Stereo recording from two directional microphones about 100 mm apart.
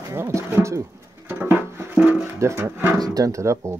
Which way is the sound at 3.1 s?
35° right (ahead or behind).